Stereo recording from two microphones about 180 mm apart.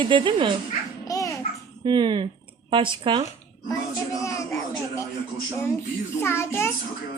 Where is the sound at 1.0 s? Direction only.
20° left (ahead or behind).